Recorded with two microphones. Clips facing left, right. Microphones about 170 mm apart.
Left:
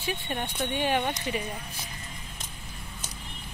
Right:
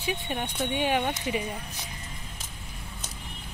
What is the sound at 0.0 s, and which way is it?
Speech, 10° right (ahead or behind).